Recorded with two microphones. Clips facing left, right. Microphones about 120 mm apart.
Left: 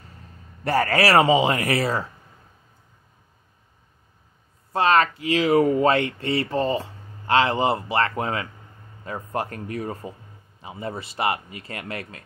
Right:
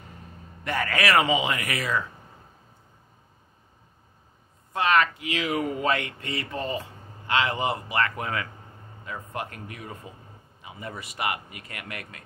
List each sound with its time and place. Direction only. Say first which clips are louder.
0.7 s speech: left 6 dB; 35° left (ahead or behind)
4.7 s speech: left 4 dB; 30° left (ahead or behind)